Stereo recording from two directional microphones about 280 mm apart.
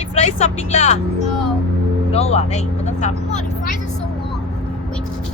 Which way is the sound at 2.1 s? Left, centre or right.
Left.